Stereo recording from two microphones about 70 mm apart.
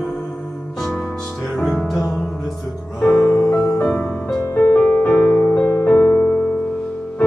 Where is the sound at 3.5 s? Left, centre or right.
Centre.